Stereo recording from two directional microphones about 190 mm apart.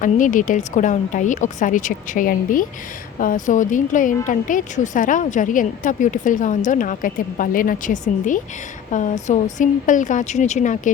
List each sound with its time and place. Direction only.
0.0 s a woman's voice: 45° left (ahead or behind)